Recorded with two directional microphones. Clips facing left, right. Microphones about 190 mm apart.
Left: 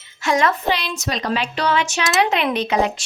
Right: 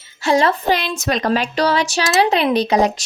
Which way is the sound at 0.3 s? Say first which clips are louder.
Right 3 dB; 30° right (ahead or behind).